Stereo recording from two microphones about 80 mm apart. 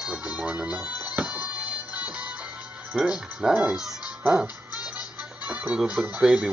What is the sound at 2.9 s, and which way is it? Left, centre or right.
Speech, centre.